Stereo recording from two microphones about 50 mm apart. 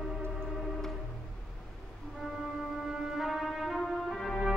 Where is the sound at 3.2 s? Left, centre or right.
Centre.